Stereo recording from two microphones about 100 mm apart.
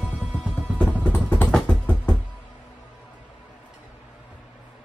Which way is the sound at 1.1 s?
20° left (ahead or behind).